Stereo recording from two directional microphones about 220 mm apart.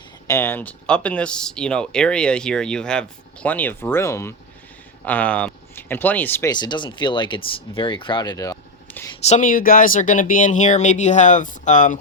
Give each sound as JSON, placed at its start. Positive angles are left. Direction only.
{"t": 0.3, "sound": "speech", "side_deg": 10}
{"t": 7.8, "sound": "a sound", "side_deg": 20}
{"t": 9.2, "sound": "speech", "side_deg": 35}